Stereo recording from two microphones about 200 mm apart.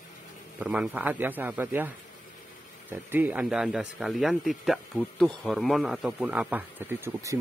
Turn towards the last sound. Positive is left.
turn(degrees=-15)  # may be behind; listen again after turning